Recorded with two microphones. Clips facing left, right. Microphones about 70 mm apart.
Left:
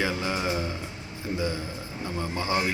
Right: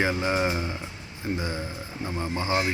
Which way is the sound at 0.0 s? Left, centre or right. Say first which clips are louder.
Right 3 dB; right.